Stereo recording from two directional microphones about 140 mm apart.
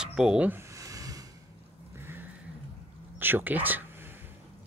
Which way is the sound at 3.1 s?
15° right (ahead or behind).